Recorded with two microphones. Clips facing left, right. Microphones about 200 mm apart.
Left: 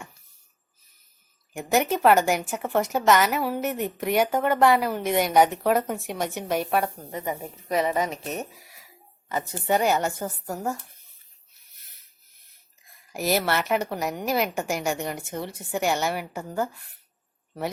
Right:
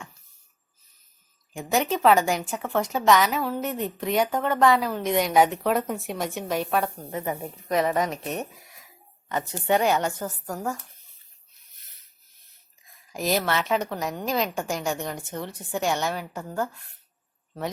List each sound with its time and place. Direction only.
1.5 s a woman's voice: 5° left (ahead or behind)
13.1 s a woman's voice: 10° left (ahead or behind)